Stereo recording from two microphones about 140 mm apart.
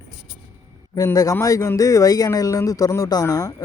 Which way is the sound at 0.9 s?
25° left (ahead or behind).